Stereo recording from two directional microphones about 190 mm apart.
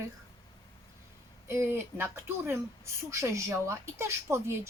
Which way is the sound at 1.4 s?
10° right (ahead or behind).